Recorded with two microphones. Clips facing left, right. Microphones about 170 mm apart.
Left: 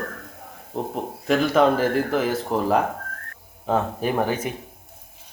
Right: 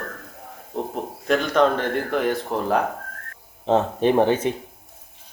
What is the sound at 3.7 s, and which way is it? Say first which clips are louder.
Speech: right 4 dB; 25° right (ahead or behind).